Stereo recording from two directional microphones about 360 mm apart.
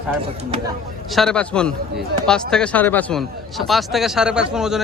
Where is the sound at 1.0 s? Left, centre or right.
Centre.